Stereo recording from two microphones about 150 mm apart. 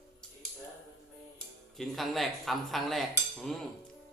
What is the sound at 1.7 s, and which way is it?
Speech, centre (ahead or behind).